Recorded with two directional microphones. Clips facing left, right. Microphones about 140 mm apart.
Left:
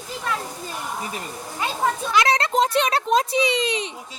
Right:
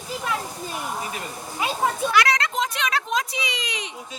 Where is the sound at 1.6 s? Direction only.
10° right (ahead or behind).